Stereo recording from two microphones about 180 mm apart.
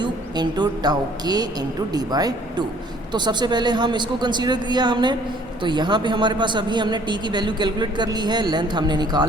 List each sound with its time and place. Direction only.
0.0 s a man's voice: 25° right (ahead or behind)